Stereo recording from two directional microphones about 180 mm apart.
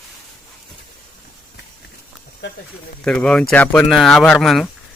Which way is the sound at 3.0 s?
5° left (ahead or behind).